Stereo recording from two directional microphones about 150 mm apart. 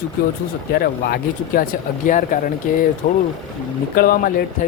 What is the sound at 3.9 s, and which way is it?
Speech, 85° left.